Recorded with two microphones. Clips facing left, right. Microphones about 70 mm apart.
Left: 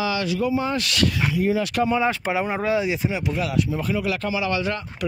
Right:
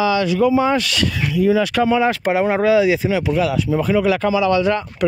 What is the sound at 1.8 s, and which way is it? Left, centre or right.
Speech, right.